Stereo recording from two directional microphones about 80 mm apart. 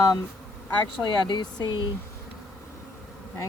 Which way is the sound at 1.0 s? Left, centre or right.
Left.